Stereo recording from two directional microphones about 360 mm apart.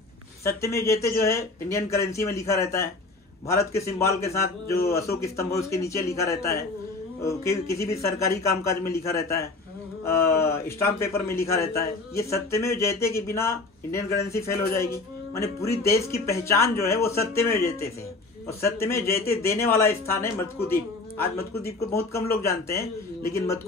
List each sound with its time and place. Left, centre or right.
0.4 s a man's voice: centre
18.6 s a man's voice: centre
21.2 s speech: left
21.7 s a man's voice: centre